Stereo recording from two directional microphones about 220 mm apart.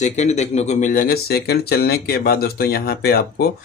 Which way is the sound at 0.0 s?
30° left (ahead or behind).